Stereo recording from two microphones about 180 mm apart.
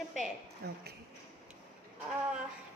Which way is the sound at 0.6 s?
65° right (ahead or behind).